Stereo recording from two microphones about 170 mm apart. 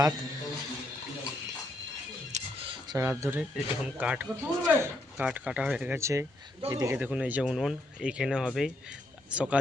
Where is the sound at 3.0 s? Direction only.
15° right (ahead or behind).